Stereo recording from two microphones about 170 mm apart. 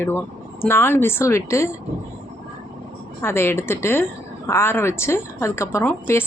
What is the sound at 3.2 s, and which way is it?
A woman's voice, 15° left (ahead or behind).